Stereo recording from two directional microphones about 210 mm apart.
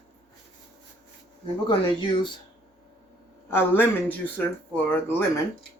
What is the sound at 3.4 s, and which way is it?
Speech, 10° left (ahead or behind).